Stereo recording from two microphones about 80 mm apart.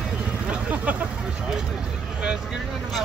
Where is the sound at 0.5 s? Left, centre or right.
Centre.